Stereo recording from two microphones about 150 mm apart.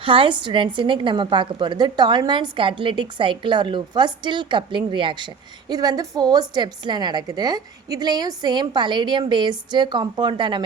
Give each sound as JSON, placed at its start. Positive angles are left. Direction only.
{"t": 0.0, "sound": "a woman's voice", "side_deg": -35}